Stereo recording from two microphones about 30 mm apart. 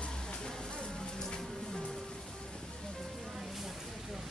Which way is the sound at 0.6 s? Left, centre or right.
Left.